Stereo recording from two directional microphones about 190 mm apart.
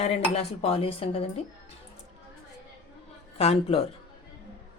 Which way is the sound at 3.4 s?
30° left (ahead or behind).